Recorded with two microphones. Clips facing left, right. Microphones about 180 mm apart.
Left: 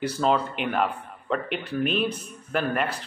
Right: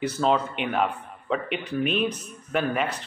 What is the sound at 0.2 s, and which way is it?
A man's voice, centre (ahead or behind).